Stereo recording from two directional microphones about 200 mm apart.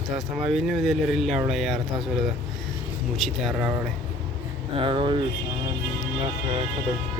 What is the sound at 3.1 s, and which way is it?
Speech, centre (ahead or behind).